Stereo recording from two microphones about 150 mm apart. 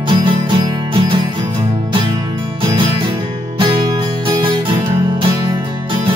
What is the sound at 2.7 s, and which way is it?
Music, 30° right (ahead or behind).